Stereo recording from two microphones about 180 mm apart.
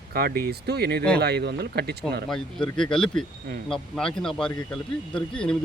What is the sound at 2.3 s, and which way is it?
A man's voice, 5° left (ahead or behind).